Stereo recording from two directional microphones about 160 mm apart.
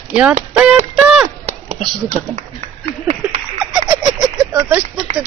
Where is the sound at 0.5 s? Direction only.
10° right (ahead or behind).